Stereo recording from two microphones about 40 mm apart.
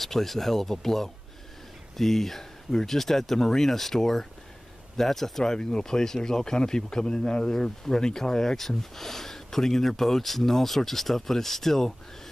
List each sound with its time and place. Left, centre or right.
0.0 s speech: centre
5.4 s speech: centre